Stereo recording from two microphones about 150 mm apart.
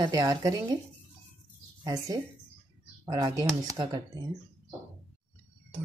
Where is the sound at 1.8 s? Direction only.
25° right (ahead or behind).